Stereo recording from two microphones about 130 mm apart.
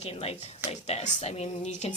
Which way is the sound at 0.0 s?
50° left (ahead or behind).